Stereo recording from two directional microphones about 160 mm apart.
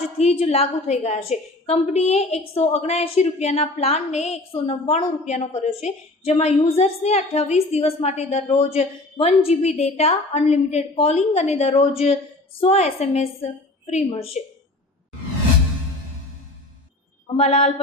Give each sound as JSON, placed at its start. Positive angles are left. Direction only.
{"t": 0.2, "sound": "a woman's voice", "side_deg": 40}
{"t": 17.2, "sound": "a woman's voice", "side_deg": 40}